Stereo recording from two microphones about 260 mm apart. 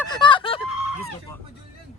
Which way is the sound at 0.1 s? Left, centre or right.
Centre.